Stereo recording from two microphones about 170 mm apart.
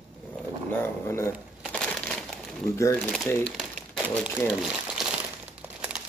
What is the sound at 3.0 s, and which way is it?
Speech, 5° left (ahead or behind).